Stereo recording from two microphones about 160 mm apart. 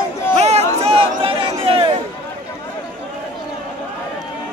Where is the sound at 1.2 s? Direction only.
35° right (ahead or behind).